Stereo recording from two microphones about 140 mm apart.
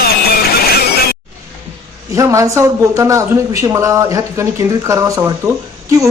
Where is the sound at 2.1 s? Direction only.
20° right (ahead or behind).